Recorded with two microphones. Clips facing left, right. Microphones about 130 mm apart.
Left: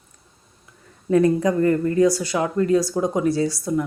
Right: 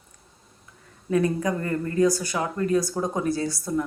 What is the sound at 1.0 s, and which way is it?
Speech, 30° left (ahead or behind).